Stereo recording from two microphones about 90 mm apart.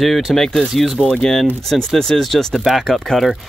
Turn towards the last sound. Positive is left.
turn(degrees=0)  # may be behind; listen again after turning